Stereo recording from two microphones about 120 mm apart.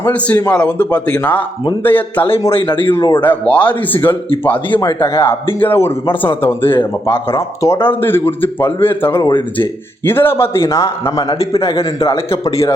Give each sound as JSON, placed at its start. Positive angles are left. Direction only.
{"t": 0.0, "sound": "speech", "side_deg": 10}
{"t": 2.5, "sound": "speech", "side_deg": 45}
{"t": 3.2, "sound": "a man's voice", "side_deg": 15}
{"t": 11.3, "sound": "a man's voice", "side_deg": 55}
{"t": 11.8, "sound": "a man's voice", "side_deg": 25}